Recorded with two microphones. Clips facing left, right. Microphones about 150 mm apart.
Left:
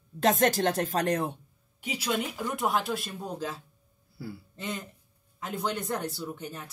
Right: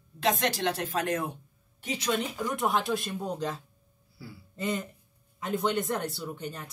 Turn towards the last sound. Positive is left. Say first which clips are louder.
# even
turn(degrees=5)  # may be behind; listen again after turning